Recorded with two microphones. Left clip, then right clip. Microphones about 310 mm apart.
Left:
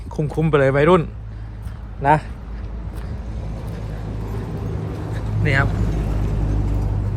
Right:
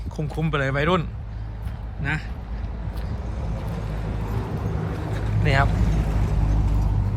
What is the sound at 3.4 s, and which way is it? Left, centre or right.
Vehicle, right.